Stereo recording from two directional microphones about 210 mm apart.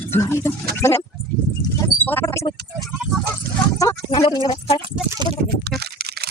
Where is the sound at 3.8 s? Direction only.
15° left (ahead or behind).